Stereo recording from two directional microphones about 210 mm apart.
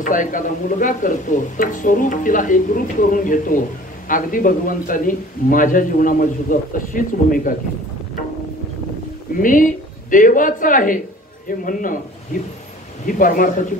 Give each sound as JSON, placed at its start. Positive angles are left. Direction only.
{"t": 0.0, "sound": "speech", "side_deg": 40}
{"t": 9.4, "sound": "speech", "side_deg": 40}
{"t": 13.0, "sound": "speech", "side_deg": 40}